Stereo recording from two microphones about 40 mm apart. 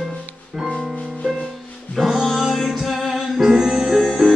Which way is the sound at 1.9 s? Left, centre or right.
Centre.